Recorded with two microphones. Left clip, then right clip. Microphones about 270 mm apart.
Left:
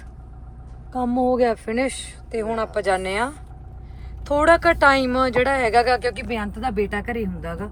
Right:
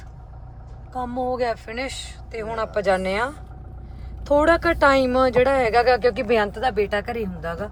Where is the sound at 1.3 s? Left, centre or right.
Left.